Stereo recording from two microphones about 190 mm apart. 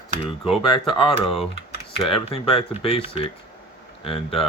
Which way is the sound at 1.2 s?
Centre (ahead or behind).